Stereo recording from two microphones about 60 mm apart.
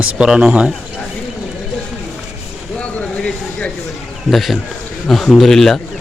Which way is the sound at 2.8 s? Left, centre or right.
Centre.